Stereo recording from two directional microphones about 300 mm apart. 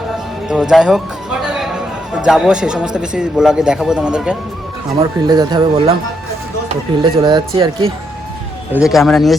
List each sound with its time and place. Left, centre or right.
0.4 s music: centre
2.1 s a man's voice: centre
4.9 s speech: centre
7.0 s speech: centre
8.7 s a man's voice: centre